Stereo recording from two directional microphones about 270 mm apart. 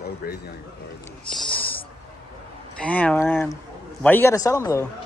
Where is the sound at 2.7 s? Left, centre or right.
Centre.